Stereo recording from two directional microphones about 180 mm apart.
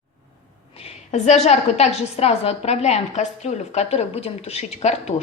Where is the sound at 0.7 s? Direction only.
35° left (ahead or behind).